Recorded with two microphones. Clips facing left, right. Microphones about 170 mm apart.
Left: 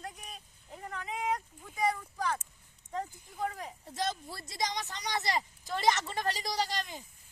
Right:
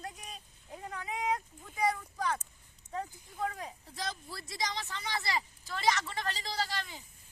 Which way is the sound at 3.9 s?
20° left (ahead or behind).